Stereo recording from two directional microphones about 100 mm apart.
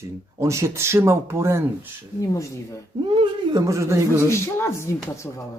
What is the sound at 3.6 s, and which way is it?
Speech, 30° right (ahead or behind).